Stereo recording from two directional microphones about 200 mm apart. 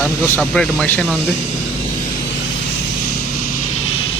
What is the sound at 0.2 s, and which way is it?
Speech, 5° left (ahead or behind).